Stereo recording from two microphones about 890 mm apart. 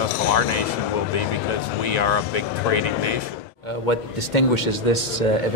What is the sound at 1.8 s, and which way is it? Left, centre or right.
Speech, left.